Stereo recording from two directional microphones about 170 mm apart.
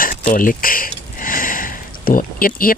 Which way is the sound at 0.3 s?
55° left (ahead or behind).